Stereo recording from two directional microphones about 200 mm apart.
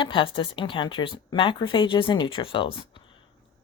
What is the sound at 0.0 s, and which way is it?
Speech, 25° left (ahead or behind).